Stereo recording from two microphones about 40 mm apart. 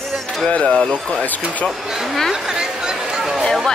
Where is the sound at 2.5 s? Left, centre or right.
Centre.